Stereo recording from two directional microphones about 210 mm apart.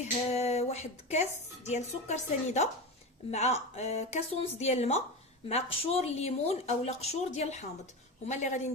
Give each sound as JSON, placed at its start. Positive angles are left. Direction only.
{"t": 0.0, "sound": "a woman's voice", "side_deg": 30}